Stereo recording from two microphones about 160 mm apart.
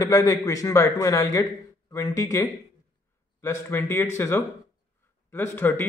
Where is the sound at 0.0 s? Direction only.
20° left (ahead or behind).